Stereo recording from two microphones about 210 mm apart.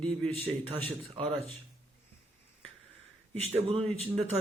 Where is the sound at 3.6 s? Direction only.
30° right (ahead or behind).